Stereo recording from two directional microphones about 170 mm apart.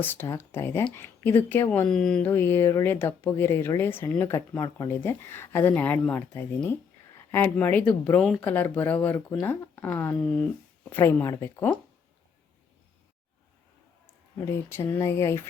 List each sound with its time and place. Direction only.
0.0 s speech: 10° left (ahead or behind)
14.3 s speech: 15° left (ahead or behind)